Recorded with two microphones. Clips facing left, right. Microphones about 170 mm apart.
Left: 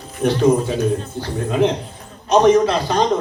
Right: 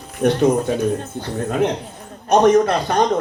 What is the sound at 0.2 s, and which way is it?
A man's voice, 55° right (ahead or behind).